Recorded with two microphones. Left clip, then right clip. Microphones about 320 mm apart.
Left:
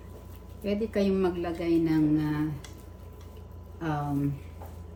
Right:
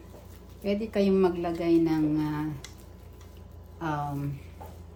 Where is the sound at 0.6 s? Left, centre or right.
Centre.